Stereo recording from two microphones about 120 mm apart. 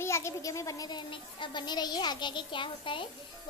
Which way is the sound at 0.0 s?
25° left (ahead or behind).